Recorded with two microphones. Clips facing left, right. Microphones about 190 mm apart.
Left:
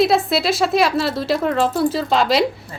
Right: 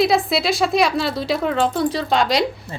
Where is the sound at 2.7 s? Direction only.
25° right (ahead or behind).